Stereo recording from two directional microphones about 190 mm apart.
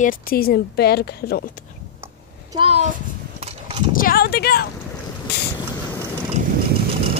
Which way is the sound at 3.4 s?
30° right (ahead or behind).